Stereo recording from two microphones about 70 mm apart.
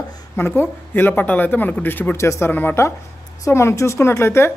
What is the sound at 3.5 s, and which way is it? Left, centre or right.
A woman's voice, left.